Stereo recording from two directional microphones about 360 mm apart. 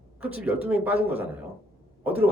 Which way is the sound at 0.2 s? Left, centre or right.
Centre.